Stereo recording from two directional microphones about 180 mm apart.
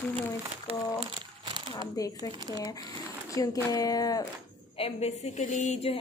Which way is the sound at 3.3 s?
20° left (ahead or behind).